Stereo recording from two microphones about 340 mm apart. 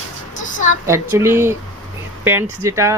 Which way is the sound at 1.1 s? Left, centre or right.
Centre.